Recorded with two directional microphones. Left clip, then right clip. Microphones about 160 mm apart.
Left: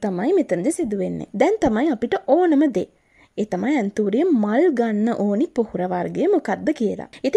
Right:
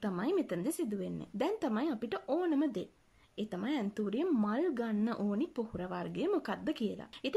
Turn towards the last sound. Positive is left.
turn(degrees=40)  # may be behind; listen again after turning